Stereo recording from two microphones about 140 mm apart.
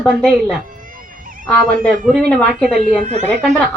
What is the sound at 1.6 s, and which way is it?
Speech, 80° right.